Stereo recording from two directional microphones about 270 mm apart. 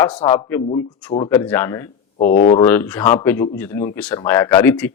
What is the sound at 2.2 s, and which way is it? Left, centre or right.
Speech, left.